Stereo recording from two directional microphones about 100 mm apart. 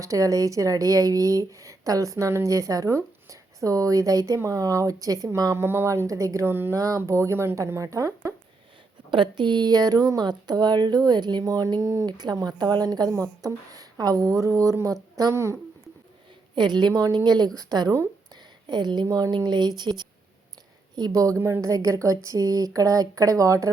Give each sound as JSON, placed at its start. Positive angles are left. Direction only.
{"t": 0.0, "sound": "speech", "side_deg": -35}
{"t": 6.7, "sound": "speech", "side_deg": -35}
{"t": 9.0, "sound": "speech", "side_deg": -55}
{"t": 12.0, "sound": "speech", "side_deg": -45}
{"t": 16.6, "sound": "speech", "side_deg": -50}
{"t": 16.9, "sound": "speech", "side_deg": -35}
{"t": 17.2, "sound": "speech", "side_deg": -45}
{"t": 19.0, "sound": "speech", "side_deg": -35}
{"t": 19.5, "sound": "speech", "side_deg": -45}
{"t": 21.3, "sound": "a woman's voice", "side_deg": -20}
{"t": 21.6, "sound": "speech", "side_deg": -35}